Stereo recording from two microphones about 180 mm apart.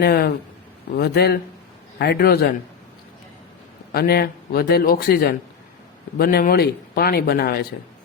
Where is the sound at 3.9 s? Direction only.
60° left (ahead or behind).